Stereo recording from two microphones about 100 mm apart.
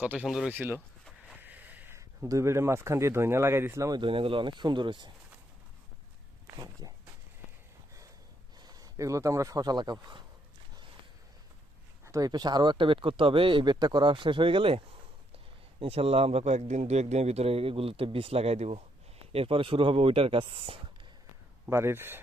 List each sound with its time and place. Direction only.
0.0 s speech: 15° right (ahead or behind)
0.3 s speech: 5° right (ahead or behind)
0.5 s speech: 20° right (ahead or behind)
1.4 s a sound: 15° right (ahead or behind)
2.0 s speech: 35° right (ahead or behind)
4.0 s speech: 60° right (ahead or behind)
6.6 s speech: 40° right (ahead or behind)
8.6 s speech: 40° right (ahead or behind)
12.0 s speech: 35° right (ahead or behind); by 14.8 s 65° right (ahead or behind)
15.8 s a man's voice: 80° right
19.3 s speech: 70° right (ahead or behind)
21.7 s speech: 25° right (ahead or behind)